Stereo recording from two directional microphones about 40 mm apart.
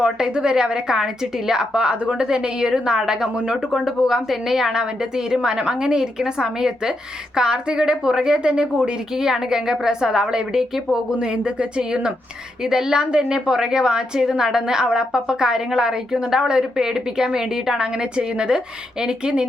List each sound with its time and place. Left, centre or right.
0.0 s a woman's voice: right
3.8 s a woman's voice: centre; by 19.5 s right